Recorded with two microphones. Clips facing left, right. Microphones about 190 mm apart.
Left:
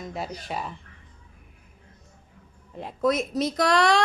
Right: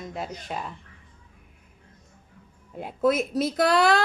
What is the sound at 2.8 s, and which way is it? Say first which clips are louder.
Speech: right 1 dB; 5° right (ahead or behind).